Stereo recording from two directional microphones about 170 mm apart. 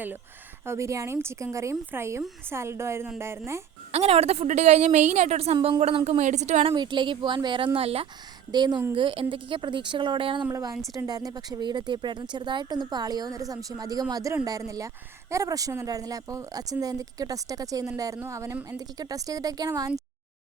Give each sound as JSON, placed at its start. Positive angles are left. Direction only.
{"t": 0.6, "sound": "speech", "side_deg": -15}
{"t": 3.9, "sound": "a woman's voice", "side_deg": -35}
{"t": 5.5, "sound": "a woman's voice", "side_deg": -25}
{"t": 6.7, "sound": "a woman's voice", "side_deg": -25}